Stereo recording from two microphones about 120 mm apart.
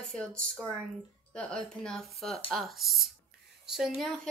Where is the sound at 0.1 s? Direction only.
5° left (ahead or behind).